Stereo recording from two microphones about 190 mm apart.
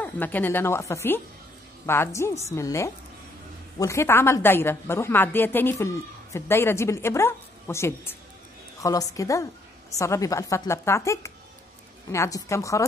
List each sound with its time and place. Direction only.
0.0 s a woman's voice: 10° left (ahead or behind)